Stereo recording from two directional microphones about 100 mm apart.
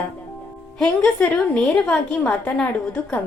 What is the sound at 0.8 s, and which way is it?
A woman's voice, 5° left (ahead or behind).